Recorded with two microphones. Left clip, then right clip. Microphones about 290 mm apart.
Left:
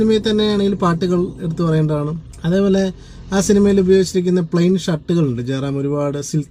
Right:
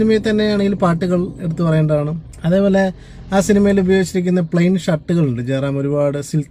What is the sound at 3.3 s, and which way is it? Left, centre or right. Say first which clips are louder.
Speech: even; right.